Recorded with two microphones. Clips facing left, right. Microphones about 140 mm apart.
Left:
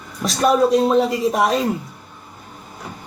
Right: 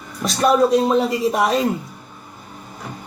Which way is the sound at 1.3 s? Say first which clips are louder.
Left 1 dB; 40° left (ahead or behind).